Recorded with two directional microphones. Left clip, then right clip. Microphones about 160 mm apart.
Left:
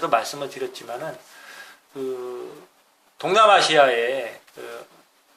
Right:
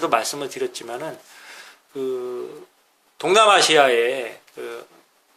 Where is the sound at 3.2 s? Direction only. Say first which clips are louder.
Right 1 dB; 40° right (ahead or behind).